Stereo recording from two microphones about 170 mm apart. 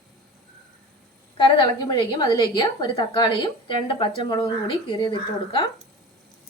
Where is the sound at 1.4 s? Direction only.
30° left (ahead or behind).